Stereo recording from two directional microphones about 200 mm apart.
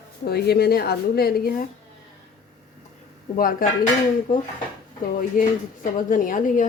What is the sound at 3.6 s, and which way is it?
Speech, 45° left (ahead or behind).